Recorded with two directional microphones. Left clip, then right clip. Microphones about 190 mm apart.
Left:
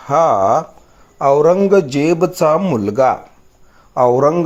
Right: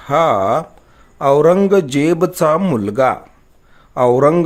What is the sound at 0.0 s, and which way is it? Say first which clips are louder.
Speech: left 1 dB; 15° right (ahead or behind).